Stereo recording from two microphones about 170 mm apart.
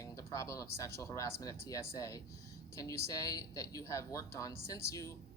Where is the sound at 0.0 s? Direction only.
15° left (ahead or behind).